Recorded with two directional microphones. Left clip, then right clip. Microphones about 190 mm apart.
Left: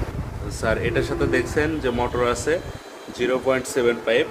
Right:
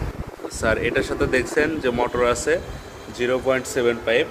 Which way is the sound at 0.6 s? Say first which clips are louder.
Right 2 dB; 10° right (ahead or behind).